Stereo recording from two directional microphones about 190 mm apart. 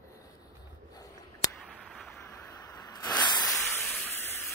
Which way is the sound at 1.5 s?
5° left (ahead or behind).